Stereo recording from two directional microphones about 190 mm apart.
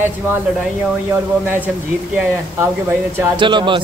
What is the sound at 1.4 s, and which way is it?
Speech, 10° right (ahead or behind).